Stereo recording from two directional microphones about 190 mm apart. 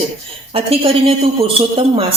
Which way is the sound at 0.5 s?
30° right (ahead or behind).